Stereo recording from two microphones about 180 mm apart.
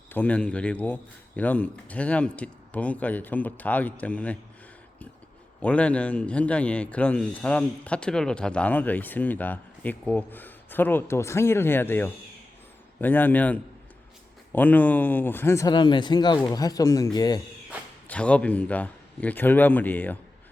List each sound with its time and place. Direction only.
0.1 s a man's voice: 10° left (ahead or behind)
5.6 s a man's voice: 5° left (ahead or behind); by 17.4 s 20° left (ahead or behind)
18.1 s a man's voice: 5° left (ahead or behind)